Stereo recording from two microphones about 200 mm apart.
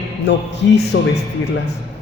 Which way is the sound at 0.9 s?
70° left (ahead or behind).